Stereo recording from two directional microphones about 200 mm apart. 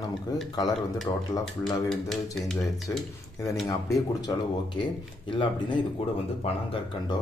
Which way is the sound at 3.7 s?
20° left (ahead or behind).